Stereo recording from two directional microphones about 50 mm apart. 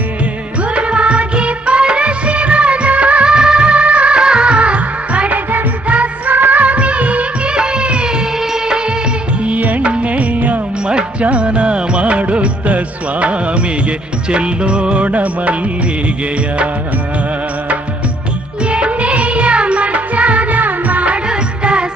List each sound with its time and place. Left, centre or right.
0.7 s music of bollywood: right
5.5 s music: right
6.3 s music of bollywood: right
6.6 s music of bollywood: right
9.4 s music: right
18.7 s music: right